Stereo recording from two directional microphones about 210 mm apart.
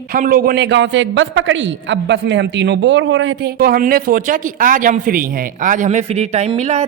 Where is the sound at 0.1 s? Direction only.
45° right (ahead or behind); by 3.5 s 65° right (ahead or behind).